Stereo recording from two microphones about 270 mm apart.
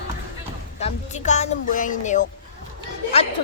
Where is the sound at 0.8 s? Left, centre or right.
Left.